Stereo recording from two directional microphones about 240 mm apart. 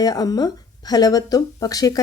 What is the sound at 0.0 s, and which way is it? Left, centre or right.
Speech, centre.